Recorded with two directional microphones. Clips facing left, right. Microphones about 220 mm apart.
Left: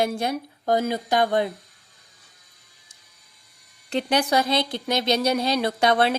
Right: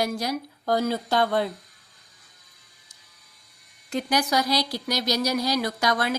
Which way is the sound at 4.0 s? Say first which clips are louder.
Left 2 dB; 30° left (ahead or behind).